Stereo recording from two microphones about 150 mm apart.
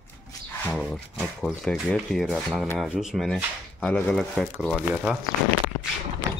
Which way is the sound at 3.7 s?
10° left (ahead or behind).